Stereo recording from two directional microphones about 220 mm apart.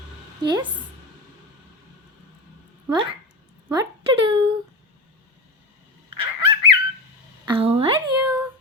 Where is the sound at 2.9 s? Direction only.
25° right (ahead or behind).